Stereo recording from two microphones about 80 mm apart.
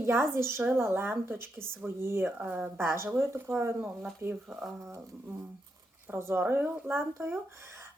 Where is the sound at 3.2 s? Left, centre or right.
Right.